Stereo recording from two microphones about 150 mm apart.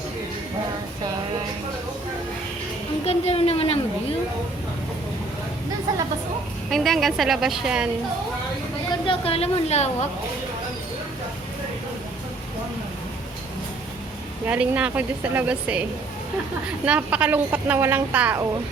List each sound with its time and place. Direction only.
3.1 s speech: 40° left (ahead or behind)
6.7 s a woman's voice: centre (ahead or behind)
9.0 s a woman's voice: 40° left (ahead or behind)
14.4 s speech: 10° right (ahead or behind)